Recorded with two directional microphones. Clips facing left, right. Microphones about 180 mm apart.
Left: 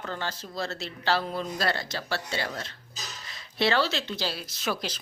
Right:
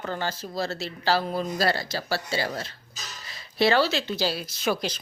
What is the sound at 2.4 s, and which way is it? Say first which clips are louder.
Speech: right 4 dB; 35° right (ahead or behind).